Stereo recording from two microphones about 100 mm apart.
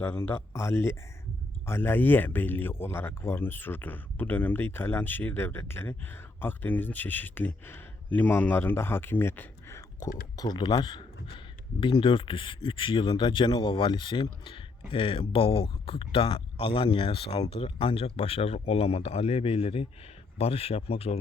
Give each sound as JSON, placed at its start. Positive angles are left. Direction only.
{"t": 0.0, "sound": "speech", "side_deg": 20}
{"t": 20.4, "sound": "speech", "side_deg": 90}